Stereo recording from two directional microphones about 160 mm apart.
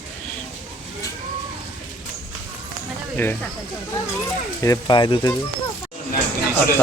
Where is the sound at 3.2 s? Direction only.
15° left (ahead or behind).